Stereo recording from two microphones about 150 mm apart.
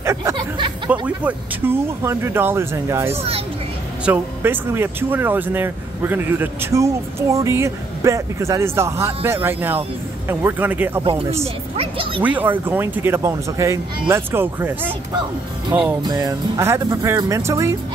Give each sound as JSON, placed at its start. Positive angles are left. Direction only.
{"t": 0.0, "sound": "a sound", "side_deg": -20}
{"t": 1.0, "sound": "speech", "side_deg": -10}
{"t": 3.1, "sound": "a child's voice", "side_deg": -40}
{"t": 4.0, "sound": "speech", "side_deg": -10}
{"t": 11.0, "sound": "a child's voice", "side_deg": -40}
{"t": 11.7, "sound": "music", "side_deg": -40}
{"t": 12.2, "sound": "speech", "side_deg": -10}
{"t": 16.0, "sound": "music", "side_deg": -25}